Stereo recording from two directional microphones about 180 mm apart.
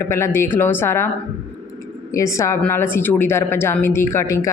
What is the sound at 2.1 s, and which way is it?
A woman's voice, 15° left (ahead or behind).